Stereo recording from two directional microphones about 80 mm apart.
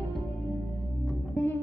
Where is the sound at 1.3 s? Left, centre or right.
Left.